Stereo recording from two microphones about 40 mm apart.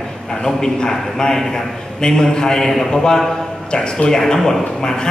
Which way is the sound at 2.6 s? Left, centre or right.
Centre.